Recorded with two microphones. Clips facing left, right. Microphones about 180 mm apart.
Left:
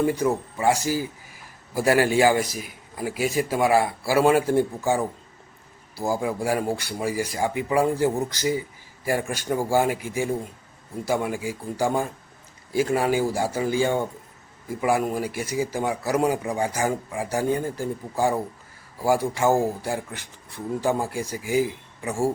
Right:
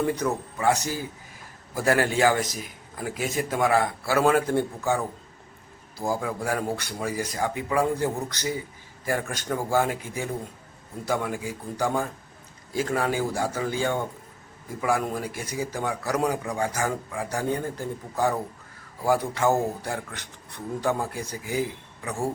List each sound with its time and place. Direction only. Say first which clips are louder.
0.0 s speech: left 3 dB; 10° left (ahead or behind)